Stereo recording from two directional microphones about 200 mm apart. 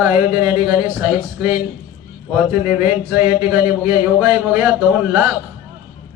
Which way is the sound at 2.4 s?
10° right (ahead or behind).